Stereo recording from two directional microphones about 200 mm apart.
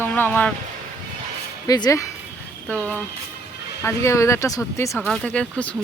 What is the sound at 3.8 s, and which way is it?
Speech, 15° left (ahead or behind).